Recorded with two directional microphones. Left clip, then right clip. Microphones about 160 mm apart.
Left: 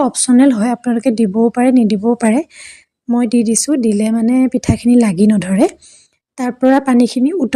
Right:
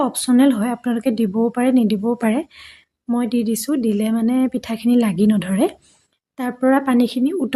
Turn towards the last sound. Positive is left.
turn(degrees=30)  # may be behind; listen again after turning